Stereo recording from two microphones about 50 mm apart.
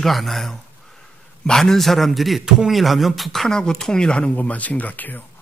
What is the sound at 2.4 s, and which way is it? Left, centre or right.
Speech, centre.